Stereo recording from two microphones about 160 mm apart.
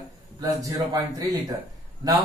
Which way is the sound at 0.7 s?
20° right (ahead or behind).